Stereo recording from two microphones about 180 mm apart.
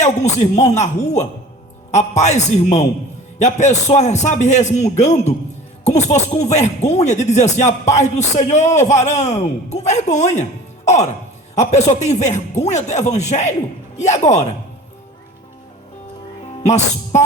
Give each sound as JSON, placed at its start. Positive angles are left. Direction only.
{"t": 0.0, "sound": "speech", "side_deg": 40}
{"t": 16.6, "sound": "speech", "side_deg": 40}